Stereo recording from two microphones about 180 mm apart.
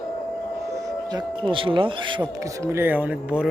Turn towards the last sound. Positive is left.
turn(degrees=-5)  # may be behind; listen again after turning